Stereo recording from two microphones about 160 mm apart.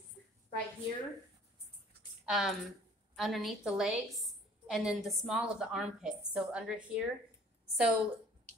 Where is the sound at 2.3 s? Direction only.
Centre (ahead or behind).